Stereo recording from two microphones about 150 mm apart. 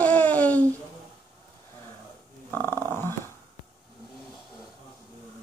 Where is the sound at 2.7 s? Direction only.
20° right (ahead or behind).